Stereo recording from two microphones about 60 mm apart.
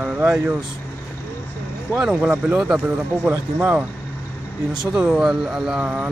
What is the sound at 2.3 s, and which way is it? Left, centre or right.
Speech, right.